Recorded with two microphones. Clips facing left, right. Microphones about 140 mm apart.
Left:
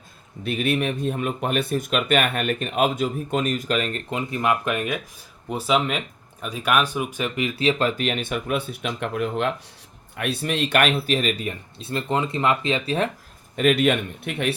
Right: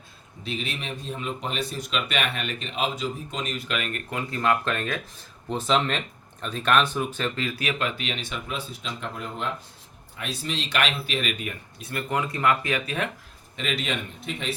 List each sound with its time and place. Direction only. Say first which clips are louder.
0.4 s speech: left 9 dB; 55° left (ahead or behind); by 4.0 s 35° left (ahead or behind)
4.1 s speech: left 1 dB; 15° left (ahead or behind); by 9.5 s 70° left (ahead or behind)
10.2 s speech: left 7 dB; 60° left (ahead or behind); by 13.1 s 30° left (ahead or behind)
13.6 s speech: left 11 dB; 55° left (ahead or behind)